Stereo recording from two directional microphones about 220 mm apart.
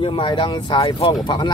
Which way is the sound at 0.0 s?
25° left (ahead or behind).